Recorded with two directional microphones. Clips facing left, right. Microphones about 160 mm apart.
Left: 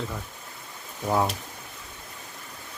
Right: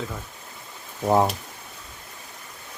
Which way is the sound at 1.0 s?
30° right (ahead or behind).